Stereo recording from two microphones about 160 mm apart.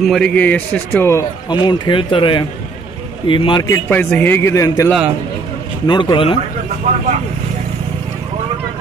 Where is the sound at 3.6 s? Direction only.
15° left (ahead or behind).